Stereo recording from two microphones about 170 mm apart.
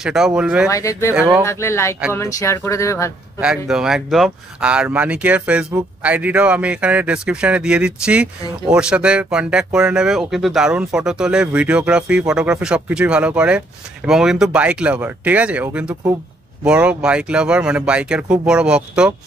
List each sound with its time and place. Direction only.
0.0 s a man's voice: 5° right (ahead or behind)
0.7 s speech: 20° left (ahead or behind)
3.3 s a man's voice: 5° right (ahead or behind)